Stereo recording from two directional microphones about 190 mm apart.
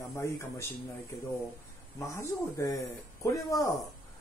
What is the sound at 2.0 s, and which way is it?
Speech, 15° left (ahead or behind).